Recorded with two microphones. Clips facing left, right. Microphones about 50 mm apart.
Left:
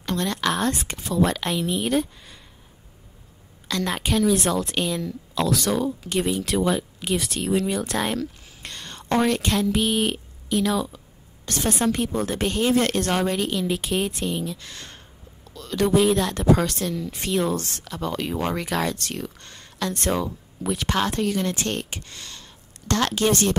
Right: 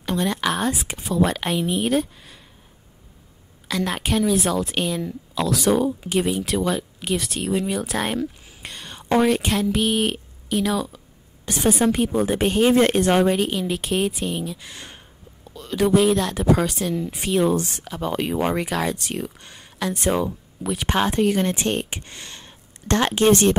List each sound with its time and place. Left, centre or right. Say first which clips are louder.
0.0 s speech: right 2 dB; centre
3.6 s a woman's voice: right 1 dB; centre
11.4 s speech: right 4 dB; centre; by 21.6 s right
21.6 s a sound: right 4 dB; right
23.0 s speech: right 6 dB; right